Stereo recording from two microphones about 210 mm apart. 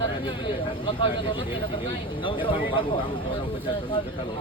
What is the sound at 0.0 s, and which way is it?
Speech, 20° left (ahead or behind).